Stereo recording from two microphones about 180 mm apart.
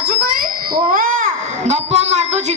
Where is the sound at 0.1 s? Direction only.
55° right (ahead or behind).